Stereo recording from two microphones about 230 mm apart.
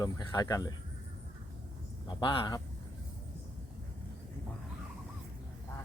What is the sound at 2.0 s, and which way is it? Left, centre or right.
Speech, left.